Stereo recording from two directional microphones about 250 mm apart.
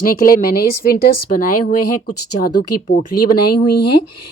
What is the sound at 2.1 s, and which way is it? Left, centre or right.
Speech, left.